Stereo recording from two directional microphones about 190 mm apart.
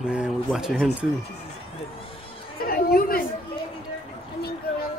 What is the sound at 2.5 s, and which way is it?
Chatter, 50° left (ahead or behind).